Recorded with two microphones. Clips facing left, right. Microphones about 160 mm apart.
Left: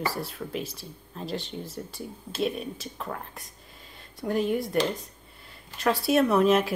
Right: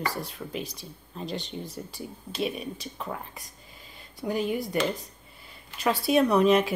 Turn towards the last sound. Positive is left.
turn(degrees=0)  # may be behind; listen again after turning